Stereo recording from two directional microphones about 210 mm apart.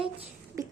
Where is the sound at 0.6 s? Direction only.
15° right (ahead or behind).